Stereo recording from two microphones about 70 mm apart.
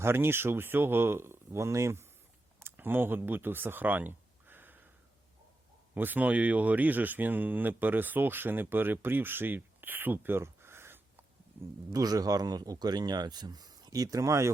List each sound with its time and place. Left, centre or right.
0.0 s speech: right
2.6 s a sound: right
5.9 s speech: right
11.9 s speech: right